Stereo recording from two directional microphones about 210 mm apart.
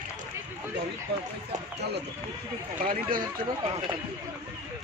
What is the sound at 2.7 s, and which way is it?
Speech, 40° right (ahead or behind).